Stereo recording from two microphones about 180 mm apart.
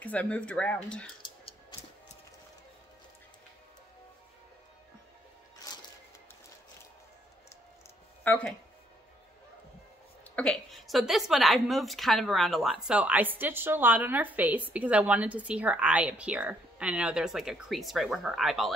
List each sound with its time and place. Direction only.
0.0 s speech: 10° left (ahead or behind)
1.4 s music: 30° left (ahead or behind)
8.2 s speech: 10° left (ahead or behind)
10.3 s a woman's voice: 5° left (ahead or behind)